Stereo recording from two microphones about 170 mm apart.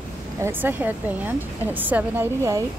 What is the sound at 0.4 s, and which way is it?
Speech, 10° right (ahead or behind).